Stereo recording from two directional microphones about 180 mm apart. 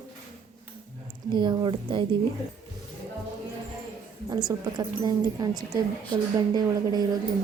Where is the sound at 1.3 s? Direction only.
25° right (ahead or behind).